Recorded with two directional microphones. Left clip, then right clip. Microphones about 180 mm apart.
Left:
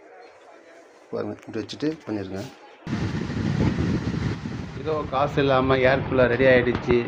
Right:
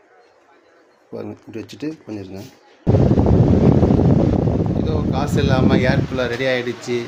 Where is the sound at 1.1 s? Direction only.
30° right (ahead or behind).